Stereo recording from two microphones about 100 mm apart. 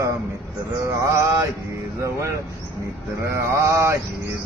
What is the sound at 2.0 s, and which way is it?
Male singing, 30° right (ahead or behind).